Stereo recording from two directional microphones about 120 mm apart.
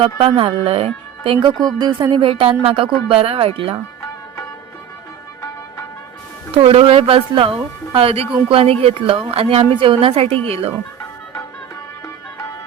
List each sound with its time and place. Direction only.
0.0 s a woman's voice: 45° right (ahead or behind)
6.6 s a woman's voice: 50° right (ahead or behind)